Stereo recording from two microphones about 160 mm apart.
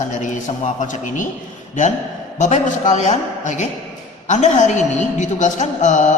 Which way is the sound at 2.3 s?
50° left (ahead or behind).